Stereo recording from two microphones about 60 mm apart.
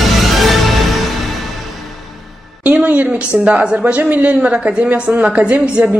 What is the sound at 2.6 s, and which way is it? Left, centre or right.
A woman's voice, right.